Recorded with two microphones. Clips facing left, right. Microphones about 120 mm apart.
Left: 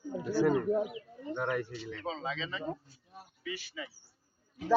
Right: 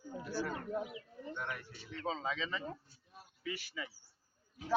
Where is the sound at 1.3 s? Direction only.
75° left (ahead or behind); by 1.9 s 90° left.